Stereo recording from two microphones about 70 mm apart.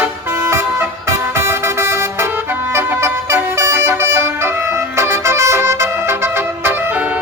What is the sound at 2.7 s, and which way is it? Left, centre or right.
Music, right.